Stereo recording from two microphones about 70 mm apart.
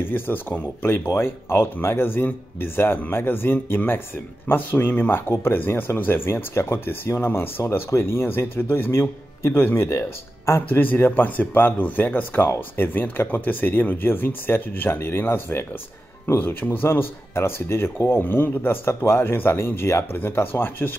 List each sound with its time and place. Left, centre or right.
0.0 s speech: left
10.8 s speech: left